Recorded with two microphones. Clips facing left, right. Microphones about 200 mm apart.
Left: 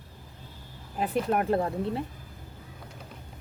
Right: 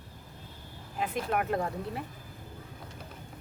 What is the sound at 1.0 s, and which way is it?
Speech, 35° left (ahead or behind).